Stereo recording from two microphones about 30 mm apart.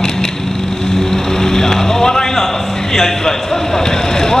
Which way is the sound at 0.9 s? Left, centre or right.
Centre.